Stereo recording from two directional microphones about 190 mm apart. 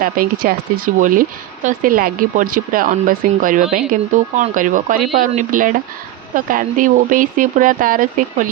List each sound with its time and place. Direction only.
0.0 s speech: 50° right (ahead or behind)